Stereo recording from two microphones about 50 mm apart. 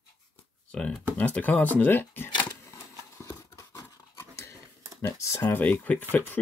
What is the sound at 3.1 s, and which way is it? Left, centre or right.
Horse, left.